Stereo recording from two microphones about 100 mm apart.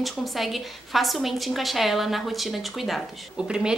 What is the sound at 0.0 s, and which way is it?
A woman's voice, centre (ahead or behind).